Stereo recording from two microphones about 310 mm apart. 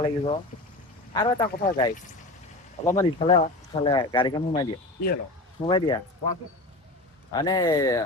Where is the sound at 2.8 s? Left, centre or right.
Centre.